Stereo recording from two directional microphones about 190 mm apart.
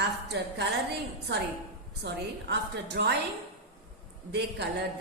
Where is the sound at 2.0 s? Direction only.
65° right (ahead or behind).